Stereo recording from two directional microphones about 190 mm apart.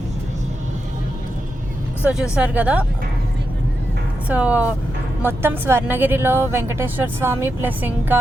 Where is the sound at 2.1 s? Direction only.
5° right (ahead or behind).